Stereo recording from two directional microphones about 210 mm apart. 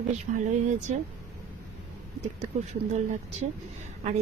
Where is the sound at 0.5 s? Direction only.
35° right (ahead or behind).